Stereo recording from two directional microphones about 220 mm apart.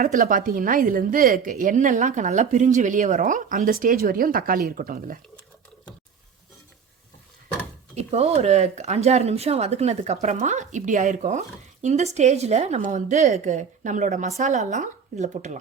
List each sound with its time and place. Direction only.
0.0 s speech: 40° right (ahead or behind)
7.9 s speech: 30° right (ahead or behind)